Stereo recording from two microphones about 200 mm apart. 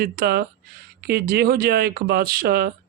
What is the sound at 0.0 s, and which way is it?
Speech, 50° right (ahead or behind).